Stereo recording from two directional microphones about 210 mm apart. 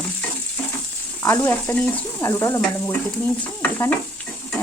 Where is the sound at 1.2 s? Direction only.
15° left (ahead or behind).